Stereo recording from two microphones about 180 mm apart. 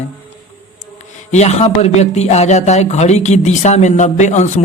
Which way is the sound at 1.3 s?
40° left (ahead or behind).